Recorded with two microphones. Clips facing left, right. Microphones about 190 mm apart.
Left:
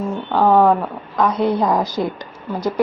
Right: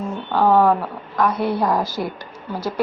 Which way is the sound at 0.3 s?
15° left (ahead or behind).